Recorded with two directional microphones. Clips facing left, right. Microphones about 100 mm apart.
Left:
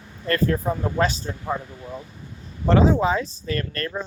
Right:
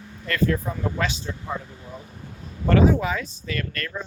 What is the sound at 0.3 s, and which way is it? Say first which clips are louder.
Speech: left 2 dB; 40° left (ahead or behind).